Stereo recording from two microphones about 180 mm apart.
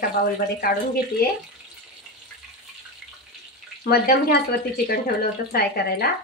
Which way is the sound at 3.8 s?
60° left (ahead or behind).